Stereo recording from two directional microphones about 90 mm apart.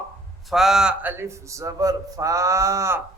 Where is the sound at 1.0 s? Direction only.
25° right (ahead or behind).